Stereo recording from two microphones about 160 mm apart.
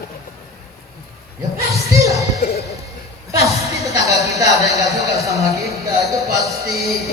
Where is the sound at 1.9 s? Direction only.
20° right (ahead or behind).